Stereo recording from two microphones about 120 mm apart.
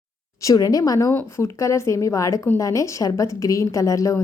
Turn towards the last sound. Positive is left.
turn(degrees=30)  # may be behind; listen again after turning